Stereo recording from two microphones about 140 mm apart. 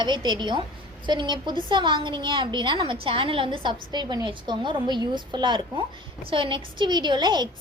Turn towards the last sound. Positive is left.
turn(degrees=-30)  # may be behind; listen again after turning